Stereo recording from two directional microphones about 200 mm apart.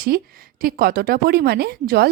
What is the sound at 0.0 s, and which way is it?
A woman's voice, 45° right (ahead or behind).